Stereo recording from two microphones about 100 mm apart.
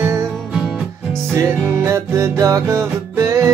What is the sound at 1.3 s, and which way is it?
Music, 30° right (ahead or behind).